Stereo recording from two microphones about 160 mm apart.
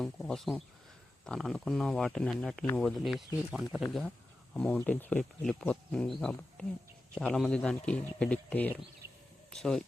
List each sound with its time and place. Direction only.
0.0 s speech: centre (ahead or behind)